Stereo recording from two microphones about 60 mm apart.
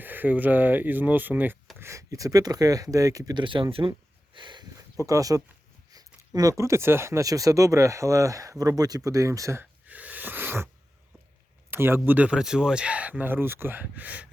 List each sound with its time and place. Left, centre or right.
0.0 s speech: right
1.8 s speech: right
4.8 s speech: right
7.2 s speech: right
9.8 s a sound: right
11.7 s speech: right
11.9 s speech: right
12.4 s speech: centre; by 13.8 s right
13.8 s speech: right